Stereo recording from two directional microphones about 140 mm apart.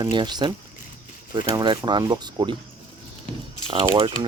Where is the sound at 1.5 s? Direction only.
35° right (ahead or behind).